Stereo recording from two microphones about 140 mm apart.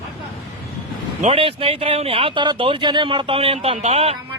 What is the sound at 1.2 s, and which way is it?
Speech, 40° right (ahead or behind).